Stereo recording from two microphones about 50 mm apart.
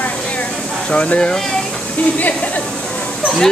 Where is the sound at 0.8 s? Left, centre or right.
Left.